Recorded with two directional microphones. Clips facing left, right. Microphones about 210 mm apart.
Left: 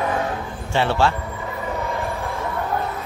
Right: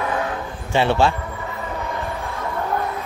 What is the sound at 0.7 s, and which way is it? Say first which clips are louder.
Speech: right 2 dB; 15° right (ahead or behind).